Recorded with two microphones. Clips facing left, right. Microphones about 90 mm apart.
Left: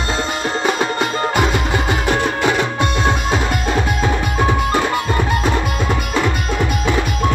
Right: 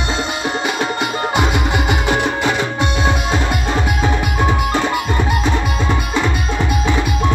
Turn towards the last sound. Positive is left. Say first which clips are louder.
# even
turn(degrees=0)  # may be behind; listen again after turning